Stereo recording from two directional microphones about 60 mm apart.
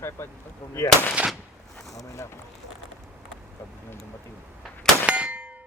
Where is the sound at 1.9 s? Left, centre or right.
Left.